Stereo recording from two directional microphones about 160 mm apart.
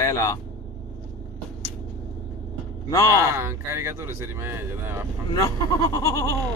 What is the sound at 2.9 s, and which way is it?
Speech, 20° left (ahead or behind).